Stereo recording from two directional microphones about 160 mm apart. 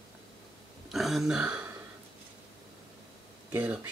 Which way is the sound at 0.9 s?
Centre (ahead or behind).